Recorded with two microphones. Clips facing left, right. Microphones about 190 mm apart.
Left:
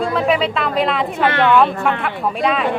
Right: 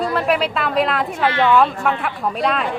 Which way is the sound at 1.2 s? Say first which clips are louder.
Left 1 dB; 60° left (ahead or behind).